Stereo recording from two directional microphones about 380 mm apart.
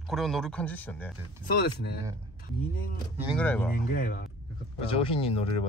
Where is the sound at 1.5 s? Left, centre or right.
Left.